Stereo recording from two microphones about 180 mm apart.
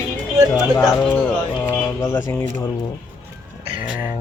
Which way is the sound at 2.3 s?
15° left (ahead or behind).